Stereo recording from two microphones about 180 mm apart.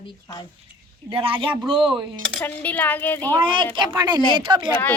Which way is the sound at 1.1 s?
30° right (ahead or behind).